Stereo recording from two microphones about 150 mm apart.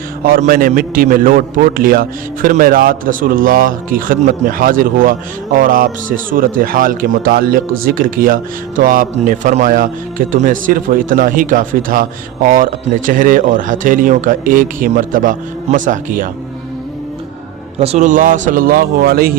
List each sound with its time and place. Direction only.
0.3 s a man's voice: 70° right (ahead or behind)
17.7 s speech: 45° right (ahead or behind); by 19.3 s 90° right